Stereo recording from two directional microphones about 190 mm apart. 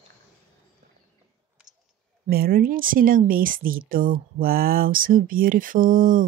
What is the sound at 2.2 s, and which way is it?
A woman's voice, 50° right (ahead or behind).